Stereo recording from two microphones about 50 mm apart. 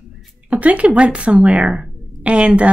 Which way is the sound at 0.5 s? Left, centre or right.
Right.